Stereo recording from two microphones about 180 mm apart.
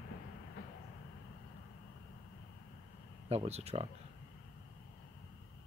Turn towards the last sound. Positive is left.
turn(degrees=-35)  # may be behind; listen again after turning